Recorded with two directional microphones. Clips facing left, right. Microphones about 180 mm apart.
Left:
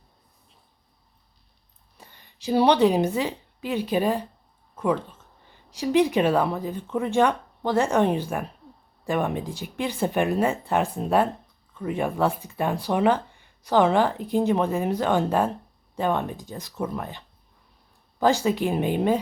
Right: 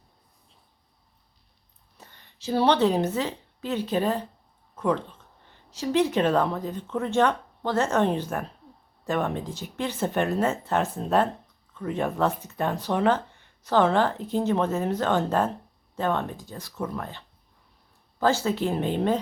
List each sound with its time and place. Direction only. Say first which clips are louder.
2.0 s a woman's voice: left 1 dB; 10° left (ahead or behind)